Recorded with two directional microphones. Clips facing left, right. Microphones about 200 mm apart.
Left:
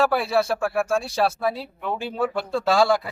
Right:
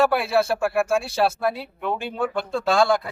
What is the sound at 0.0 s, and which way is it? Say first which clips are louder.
Speech: right 1 dB; centre (ahead or behind).